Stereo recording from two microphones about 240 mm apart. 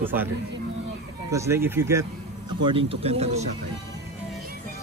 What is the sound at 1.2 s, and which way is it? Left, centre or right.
Speech, centre.